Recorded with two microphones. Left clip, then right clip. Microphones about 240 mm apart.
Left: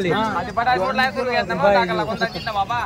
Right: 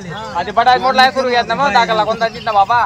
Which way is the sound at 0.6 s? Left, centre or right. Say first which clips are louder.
Right 9 dB; right.